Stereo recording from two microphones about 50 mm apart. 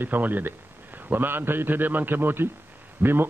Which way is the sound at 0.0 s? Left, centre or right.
Right.